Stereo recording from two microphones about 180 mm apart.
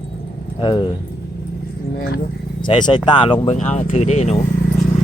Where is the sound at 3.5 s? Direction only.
40° left (ahead or behind).